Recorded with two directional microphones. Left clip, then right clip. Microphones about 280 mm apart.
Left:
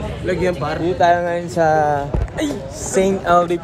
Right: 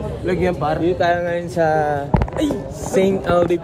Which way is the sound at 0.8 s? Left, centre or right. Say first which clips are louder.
Left 5 dB; centre.